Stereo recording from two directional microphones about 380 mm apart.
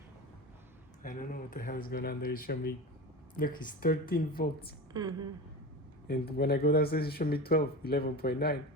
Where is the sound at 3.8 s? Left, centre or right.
Left.